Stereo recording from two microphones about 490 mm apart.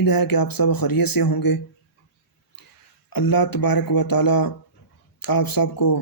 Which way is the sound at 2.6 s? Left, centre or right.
Left.